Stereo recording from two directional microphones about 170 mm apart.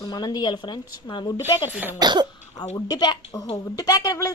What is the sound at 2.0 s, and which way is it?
Speech, 25° right (ahead or behind).